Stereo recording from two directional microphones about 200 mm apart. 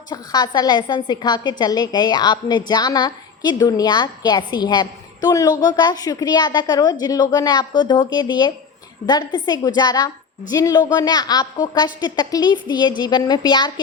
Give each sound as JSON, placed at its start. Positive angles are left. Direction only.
{"t": 0.1, "sound": "a woman's voice", "side_deg": 20}